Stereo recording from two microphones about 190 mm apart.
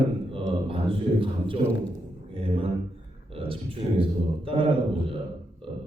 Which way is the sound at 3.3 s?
30° right (ahead or behind).